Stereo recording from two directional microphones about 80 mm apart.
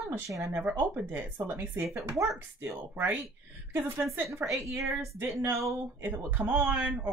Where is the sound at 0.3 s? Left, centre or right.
Right.